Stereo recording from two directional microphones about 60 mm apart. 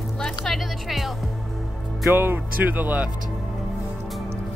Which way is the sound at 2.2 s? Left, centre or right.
Right.